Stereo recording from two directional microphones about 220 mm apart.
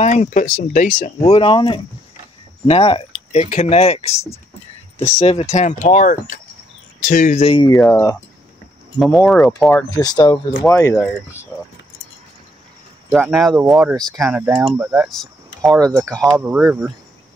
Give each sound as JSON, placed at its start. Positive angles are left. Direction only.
{"t": 0.0, "sound": "speech", "side_deg": 30}
{"t": 5.2, "sound": "speech", "side_deg": 25}
{"t": 7.7, "sound": "speech", "side_deg": 5}
{"t": 9.0, "sound": "speech", "side_deg": 0}
{"t": 9.9, "sound": "speech", "side_deg": 15}
{"t": 13.1, "sound": "speech", "side_deg": -5}
{"t": 15.7, "sound": "speech", "side_deg": -15}
{"t": 16.0, "sound": "speech", "side_deg": 5}
{"t": 16.3, "sound": "speech", "side_deg": -10}